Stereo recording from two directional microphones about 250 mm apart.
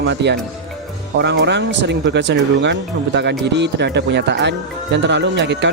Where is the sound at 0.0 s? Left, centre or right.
Right.